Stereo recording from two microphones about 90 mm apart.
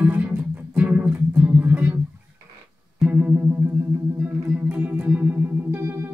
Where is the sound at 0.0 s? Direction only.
20° right (ahead or behind).